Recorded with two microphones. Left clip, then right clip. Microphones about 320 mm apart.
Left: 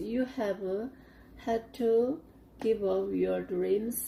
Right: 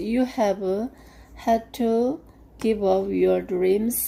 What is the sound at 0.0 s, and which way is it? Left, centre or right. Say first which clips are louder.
A woman's voice: right 10 dB; right.